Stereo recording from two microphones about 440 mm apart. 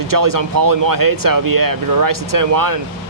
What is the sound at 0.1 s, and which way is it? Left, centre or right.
Speech, right.